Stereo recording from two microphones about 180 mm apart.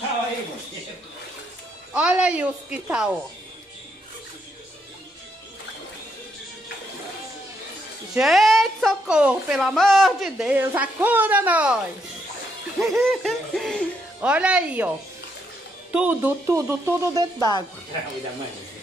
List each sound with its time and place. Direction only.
2.0 s speech: 5° right (ahead or behind)
8.1 s a woman's voice: centre (ahead or behind)
12.8 s a woman's voice: centre (ahead or behind)
15.9 s speech: 10° right (ahead or behind)
17.4 s a woman's voice: 20° left (ahead or behind)